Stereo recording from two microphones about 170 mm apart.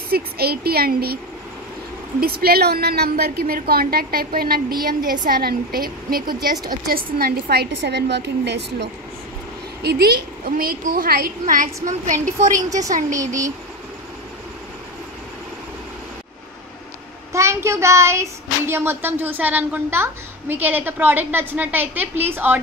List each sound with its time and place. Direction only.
0.1 s a woman's voice: 65° right (ahead or behind); by 8.8 s 80° right
9.8 s a woman's voice: 70° right (ahead or behind); by 12.4 s 50° right (ahead or behind)
12.4 s a woman's voice: 20° right (ahead or behind)
17.3 s child singing: 15° right (ahead or behind)
18.7 s a woman's voice: 15° right (ahead or behind)